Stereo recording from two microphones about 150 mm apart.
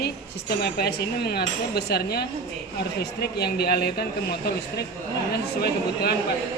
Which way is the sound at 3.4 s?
90° left.